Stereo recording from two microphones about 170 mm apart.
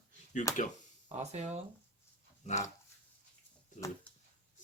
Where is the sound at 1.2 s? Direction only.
40° right (ahead or behind).